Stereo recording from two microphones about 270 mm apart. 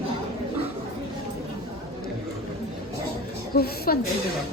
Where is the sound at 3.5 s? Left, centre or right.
Left.